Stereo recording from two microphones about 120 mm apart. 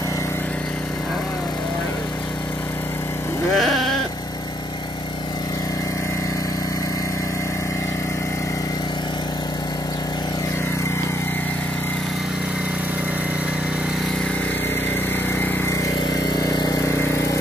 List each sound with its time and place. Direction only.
3.5 s sheep: centre (ahead or behind)
15.3 s vehicle: 15° left (ahead or behind)
16.3 s vehicle: 35° left (ahead or behind)
16.8 s vehicle: 20° left (ahead or behind)